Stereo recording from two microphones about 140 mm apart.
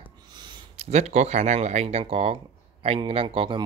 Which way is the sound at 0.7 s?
50° right (ahead or behind).